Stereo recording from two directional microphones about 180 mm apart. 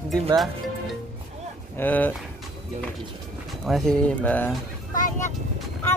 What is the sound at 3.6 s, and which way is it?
Speech, centre (ahead or behind).